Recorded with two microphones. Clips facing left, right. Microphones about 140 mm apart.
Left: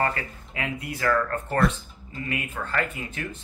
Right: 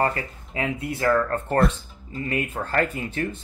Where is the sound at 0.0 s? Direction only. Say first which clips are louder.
Right 3 dB; 30° right (ahead or behind).